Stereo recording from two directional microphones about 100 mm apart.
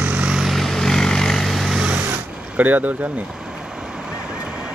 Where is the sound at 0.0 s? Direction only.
15° right (ahead or behind).